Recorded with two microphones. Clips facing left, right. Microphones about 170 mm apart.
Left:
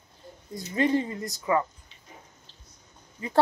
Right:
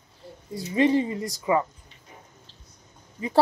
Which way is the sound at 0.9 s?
15° right (ahead or behind).